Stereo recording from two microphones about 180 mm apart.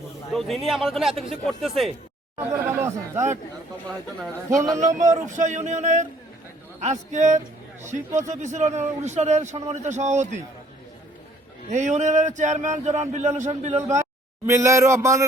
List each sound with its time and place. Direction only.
0.3 s speech: centre (ahead or behind)
2.4 s speech: 15° right (ahead or behind)
4.8 s a man's voice: 45° right (ahead or behind)
11.7 s a man's voice: 40° right (ahead or behind)
14.4 s speech: 15° right (ahead or behind)